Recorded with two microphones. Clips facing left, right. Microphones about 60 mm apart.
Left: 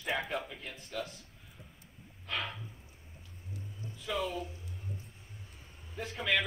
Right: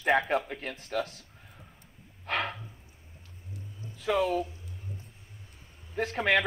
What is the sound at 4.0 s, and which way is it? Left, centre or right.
Speech, right.